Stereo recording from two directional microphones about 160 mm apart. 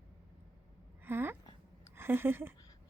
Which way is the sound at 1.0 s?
15° right (ahead or behind).